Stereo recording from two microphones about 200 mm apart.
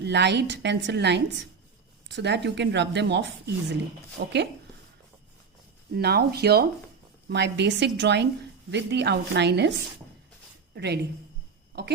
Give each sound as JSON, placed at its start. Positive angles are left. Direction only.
{"t": 0.0, "sound": "speech", "side_deg": -60}
{"t": 5.9, "sound": "speech", "side_deg": -55}
{"t": 10.8, "sound": "speech", "side_deg": -55}